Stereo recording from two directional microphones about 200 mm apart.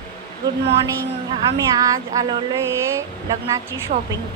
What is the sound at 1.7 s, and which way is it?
Speech, 15° right (ahead or behind).